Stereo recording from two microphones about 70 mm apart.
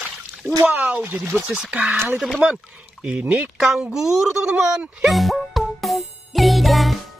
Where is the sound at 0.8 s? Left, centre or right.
Right.